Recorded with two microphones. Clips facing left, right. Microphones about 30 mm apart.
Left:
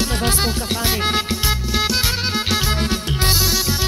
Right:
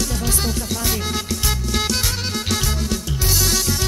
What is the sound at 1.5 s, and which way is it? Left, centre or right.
Music, centre.